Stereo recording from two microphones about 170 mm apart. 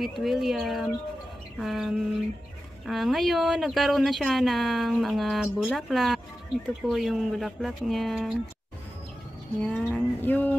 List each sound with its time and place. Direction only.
0.0 s speech: centre (ahead or behind)
9.6 s speech: 5° left (ahead or behind)
9.9 s a sound: 10° left (ahead or behind)